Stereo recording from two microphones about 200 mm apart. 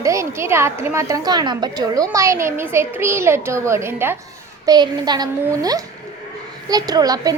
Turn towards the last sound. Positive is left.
turn(degrees=-20)  # may be behind; listen again after turning